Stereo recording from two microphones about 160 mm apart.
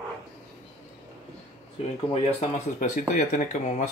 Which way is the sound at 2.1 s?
40° left (ahead or behind).